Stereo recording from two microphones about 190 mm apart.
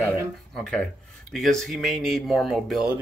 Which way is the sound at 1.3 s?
Centre (ahead or behind).